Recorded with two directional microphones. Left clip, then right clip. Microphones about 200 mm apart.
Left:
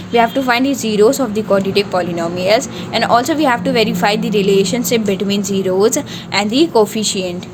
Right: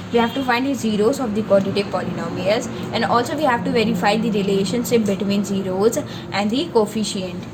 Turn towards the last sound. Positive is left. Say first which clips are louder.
# left 6 dB
turn(degrees=55)  # may be behind; listen again after turning